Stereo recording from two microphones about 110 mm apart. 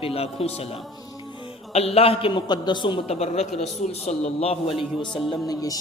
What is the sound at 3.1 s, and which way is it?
A man's voice, 70° left (ahead or behind).